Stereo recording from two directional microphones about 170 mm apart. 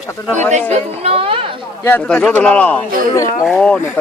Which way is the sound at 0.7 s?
35° right (ahead or behind).